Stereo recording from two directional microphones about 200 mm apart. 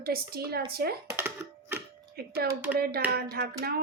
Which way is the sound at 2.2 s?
50° right (ahead or behind).